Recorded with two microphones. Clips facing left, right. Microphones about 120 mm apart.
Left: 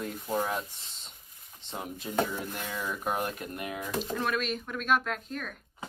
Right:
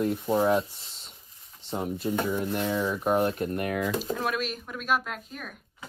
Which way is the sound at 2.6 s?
25° right (ahead or behind).